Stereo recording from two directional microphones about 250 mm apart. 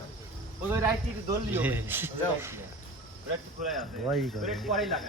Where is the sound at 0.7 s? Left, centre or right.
Centre.